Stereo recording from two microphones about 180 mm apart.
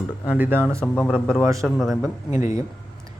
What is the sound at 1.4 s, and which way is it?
Speech, 15° right (ahead or behind).